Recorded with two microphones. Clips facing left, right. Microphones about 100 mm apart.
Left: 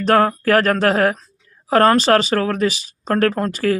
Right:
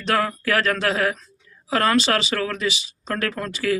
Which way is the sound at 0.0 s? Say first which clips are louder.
Left 7 dB; 45° left (ahead or behind).